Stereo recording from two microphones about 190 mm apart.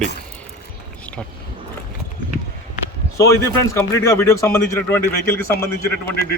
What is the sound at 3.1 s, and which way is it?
A man's voice, 15° left (ahead or behind).